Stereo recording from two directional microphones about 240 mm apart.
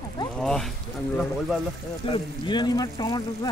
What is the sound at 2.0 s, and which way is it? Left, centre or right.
Speech, left.